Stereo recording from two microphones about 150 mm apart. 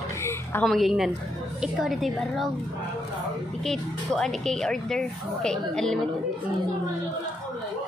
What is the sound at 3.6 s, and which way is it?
Speech, 5° left (ahead or behind).